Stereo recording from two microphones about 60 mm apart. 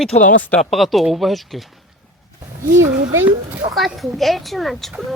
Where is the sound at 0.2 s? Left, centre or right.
Left.